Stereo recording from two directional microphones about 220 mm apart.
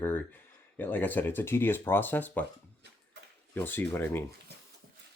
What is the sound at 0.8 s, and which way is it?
Speech, 10° left (ahead or behind).